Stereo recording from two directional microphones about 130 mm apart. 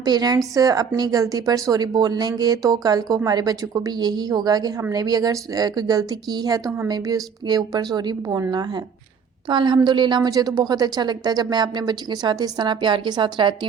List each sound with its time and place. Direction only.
0.0 s a woman's voice: 30° right (ahead or behind)